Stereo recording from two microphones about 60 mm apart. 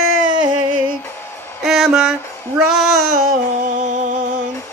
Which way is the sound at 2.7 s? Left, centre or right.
Centre.